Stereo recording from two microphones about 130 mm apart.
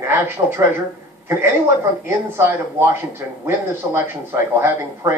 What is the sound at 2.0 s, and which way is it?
A man's voice, 15° right (ahead or behind).